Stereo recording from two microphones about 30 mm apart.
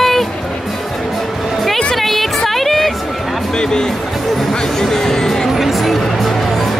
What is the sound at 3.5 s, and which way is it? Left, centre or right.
Music, left.